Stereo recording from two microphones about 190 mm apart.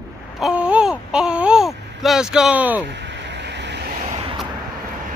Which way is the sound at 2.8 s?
65° right (ahead or behind).